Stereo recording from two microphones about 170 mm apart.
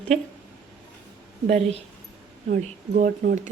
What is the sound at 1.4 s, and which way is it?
A woman's voice, 35° right (ahead or behind).